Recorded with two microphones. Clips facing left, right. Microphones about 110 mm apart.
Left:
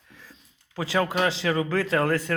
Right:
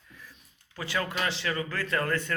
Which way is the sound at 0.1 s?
90° left.